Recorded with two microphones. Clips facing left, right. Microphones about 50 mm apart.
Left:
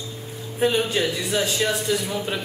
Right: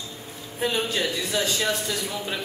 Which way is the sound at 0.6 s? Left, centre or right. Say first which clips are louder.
Left 4 dB; centre.